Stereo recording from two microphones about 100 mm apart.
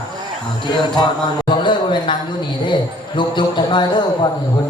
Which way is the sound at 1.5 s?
50° left (ahead or behind).